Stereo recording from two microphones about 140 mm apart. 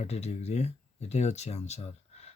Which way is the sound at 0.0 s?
50° left (ahead or behind).